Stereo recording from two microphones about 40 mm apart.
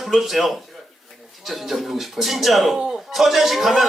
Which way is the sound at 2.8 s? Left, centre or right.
Centre.